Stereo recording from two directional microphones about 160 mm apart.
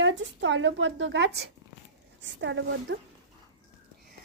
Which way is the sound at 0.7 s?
90° right.